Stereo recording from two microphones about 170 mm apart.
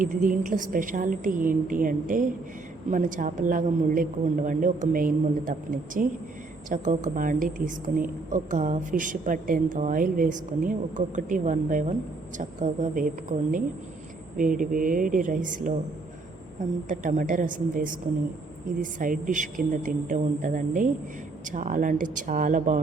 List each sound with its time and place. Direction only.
0.0 s a woman's voice: 55° right (ahead or behind)
16.9 s a woman's voice: 50° right (ahead or behind)